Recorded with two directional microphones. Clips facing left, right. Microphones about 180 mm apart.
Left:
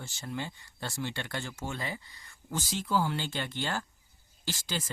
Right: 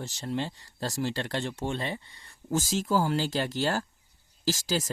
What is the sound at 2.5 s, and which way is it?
Speech, 45° right (ahead or behind).